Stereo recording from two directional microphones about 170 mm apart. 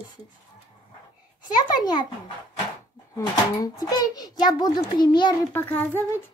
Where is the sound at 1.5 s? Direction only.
25° left (ahead or behind).